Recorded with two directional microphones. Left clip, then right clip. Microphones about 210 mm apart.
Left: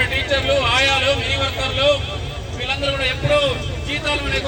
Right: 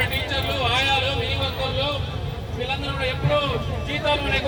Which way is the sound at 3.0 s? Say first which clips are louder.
Left 4 dB; 50° left (ahead or behind).